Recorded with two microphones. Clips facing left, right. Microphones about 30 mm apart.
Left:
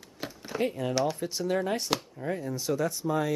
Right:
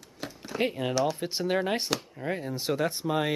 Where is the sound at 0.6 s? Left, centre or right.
Right.